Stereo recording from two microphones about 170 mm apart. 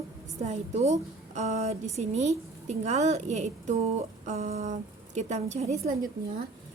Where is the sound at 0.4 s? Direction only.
40° right (ahead or behind).